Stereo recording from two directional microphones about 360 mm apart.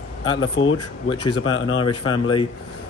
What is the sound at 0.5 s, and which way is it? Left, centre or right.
Speech, left.